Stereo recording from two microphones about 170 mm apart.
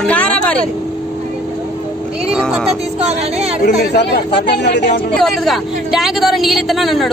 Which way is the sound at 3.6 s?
80° left.